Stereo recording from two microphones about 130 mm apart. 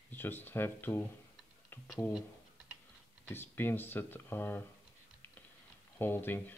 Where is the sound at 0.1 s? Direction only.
15° left (ahead or behind).